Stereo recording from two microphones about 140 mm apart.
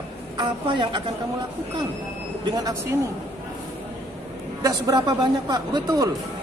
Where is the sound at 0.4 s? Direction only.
35° right (ahead or behind).